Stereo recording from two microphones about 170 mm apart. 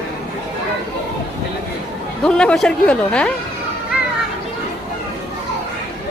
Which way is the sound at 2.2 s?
5° left (ahead or behind).